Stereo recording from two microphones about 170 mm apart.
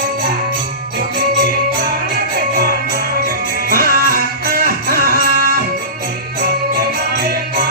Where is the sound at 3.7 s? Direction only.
60° right (ahead or behind).